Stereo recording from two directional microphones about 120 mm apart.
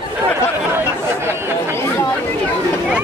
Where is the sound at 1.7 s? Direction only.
20° left (ahead or behind).